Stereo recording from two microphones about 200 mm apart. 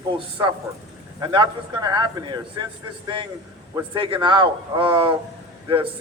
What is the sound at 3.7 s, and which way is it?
Speech, 25° right (ahead or behind).